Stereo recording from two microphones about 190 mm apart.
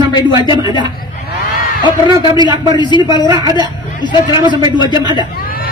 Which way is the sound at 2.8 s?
25° left (ahead or behind).